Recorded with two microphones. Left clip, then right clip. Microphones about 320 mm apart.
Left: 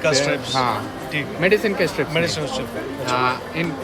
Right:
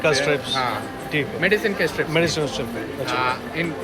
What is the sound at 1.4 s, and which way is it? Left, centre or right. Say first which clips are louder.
Speech: left 3 dB; left.